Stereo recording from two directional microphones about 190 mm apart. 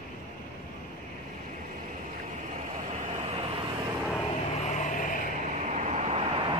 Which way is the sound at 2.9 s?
35° right (ahead or behind).